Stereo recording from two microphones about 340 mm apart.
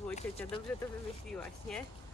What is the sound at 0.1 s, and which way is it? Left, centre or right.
Speech, centre.